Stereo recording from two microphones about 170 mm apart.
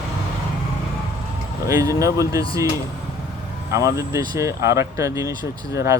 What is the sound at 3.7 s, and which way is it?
Speech, 20° right (ahead or behind).